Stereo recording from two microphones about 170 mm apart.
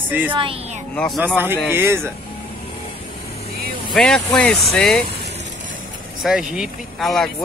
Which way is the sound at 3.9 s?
5° left (ahead or behind).